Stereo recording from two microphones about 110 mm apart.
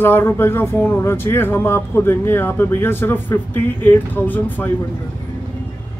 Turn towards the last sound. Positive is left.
turn(degrees=15)  # may be behind; listen again after turning